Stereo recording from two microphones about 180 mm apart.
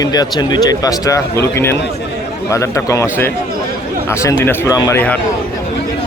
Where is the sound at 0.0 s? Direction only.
20° left (ahead or behind).